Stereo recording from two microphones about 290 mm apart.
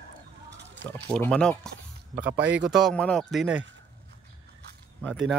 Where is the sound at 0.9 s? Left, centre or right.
Centre.